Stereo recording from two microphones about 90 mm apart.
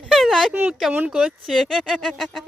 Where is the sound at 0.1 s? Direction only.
Centre (ahead or behind).